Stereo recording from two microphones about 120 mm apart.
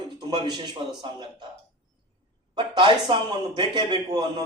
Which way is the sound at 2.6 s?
40° right (ahead or behind).